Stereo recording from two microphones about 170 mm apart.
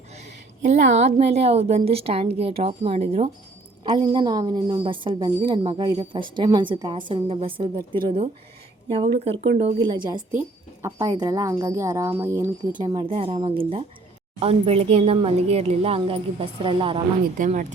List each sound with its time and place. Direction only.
0.9 s speech: 40° right (ahead or behind)
3.8 s a woman's voice: 25° right (ahead or behind)
9.8 s a woman's voice: 25° right (ahead or behind)
17.3 s speech: 50° right (ahead or behind)